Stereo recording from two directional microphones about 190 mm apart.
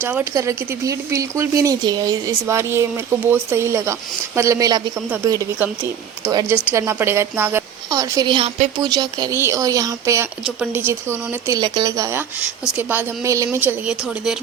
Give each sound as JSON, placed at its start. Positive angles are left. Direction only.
{"t": 0.0, "sound": "speech", "side_deg": -10}
{"t": 8.8, "sound": "speech", "side_deg": -20}